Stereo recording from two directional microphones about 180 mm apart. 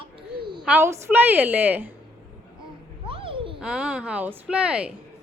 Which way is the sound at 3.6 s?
5° right (ahead or behind).